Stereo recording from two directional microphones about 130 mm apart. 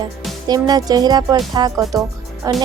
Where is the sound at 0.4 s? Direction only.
30° right (ahead or behind).